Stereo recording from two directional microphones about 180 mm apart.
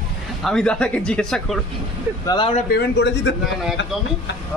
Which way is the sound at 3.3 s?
75° left (ahead or behind).